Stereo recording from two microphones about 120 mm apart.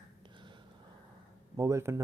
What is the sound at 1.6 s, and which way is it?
Speech, 25° right (ahead or behind).